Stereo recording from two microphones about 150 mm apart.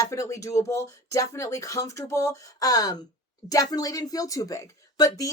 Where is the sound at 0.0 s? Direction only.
20° left (ahead or behind).